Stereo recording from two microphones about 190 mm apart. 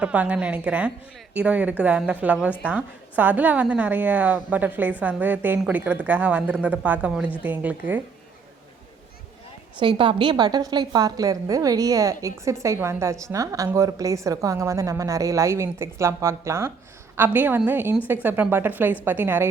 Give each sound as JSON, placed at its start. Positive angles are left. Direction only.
{"t": 0.0, "sound": "a woman's voice", "side_deg": -5}
{"t": 9.8, "sound": "a woman's voice", "side_deg": -25}